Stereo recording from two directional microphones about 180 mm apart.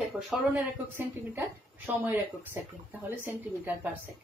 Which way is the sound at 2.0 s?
10° right (ahead or behind).